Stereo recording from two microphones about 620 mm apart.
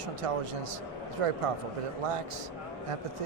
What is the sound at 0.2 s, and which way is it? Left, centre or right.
A man's voice, right.